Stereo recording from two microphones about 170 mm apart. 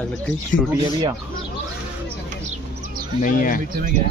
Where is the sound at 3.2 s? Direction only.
55° left (ahead or behind).